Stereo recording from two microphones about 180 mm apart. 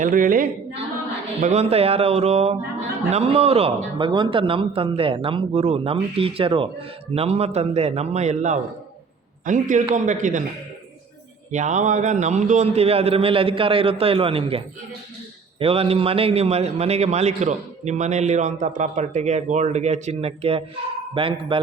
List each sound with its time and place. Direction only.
0.0 s speech: 50° right (ahead or behind)
1.4 s a man's voice: 40° right (ahead or behind)
11.5 s a man's voice: 45° right (ahead or behind)